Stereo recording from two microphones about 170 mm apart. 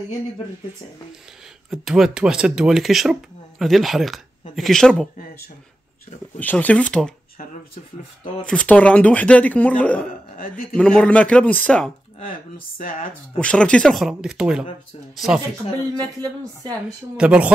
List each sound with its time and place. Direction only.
1.7 s speech: centre (ahead or behind)
6.4 s speech: 10° left (ahead or behind)
8.5 s speech: 5° left (ahead or behind)
10.3 s a man's voice: 55° left (ahead or behind)
10.8 s speech: 5° left (ahead or behind)
12.7 s speech: 55° left (ahead or behind)
13.4 s speech: 5° left (ahead or behind)
17.2 s speech: 5° right (ahead or behind)